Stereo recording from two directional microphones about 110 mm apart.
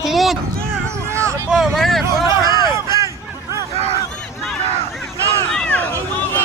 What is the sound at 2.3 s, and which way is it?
Speech, 30° right (ahead or behind).